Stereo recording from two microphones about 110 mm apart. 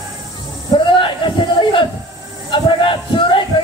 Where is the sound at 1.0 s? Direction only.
50° left (ahead or behind).